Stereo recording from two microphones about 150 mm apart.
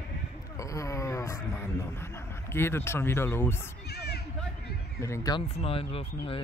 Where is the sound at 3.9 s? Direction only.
90° left.